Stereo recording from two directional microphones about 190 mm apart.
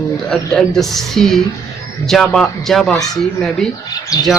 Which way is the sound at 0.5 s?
Centre (ahead or behind).